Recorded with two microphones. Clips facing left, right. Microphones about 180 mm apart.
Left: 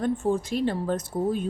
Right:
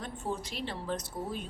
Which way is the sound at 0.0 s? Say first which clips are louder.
Left 12 dB; 50° left (ahead or behind).